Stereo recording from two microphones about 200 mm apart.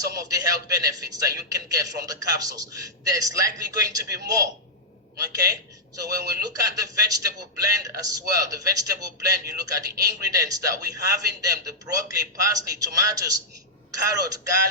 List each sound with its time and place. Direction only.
0.0 s a man's voice: 15° right (ahead or behind)